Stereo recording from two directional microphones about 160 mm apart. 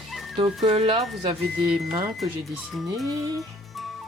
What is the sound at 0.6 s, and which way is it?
Speech, 35° right (ahead or behind).